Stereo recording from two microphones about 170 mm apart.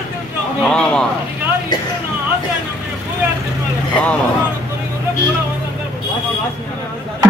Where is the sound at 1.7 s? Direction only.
25° left (ahead or behind).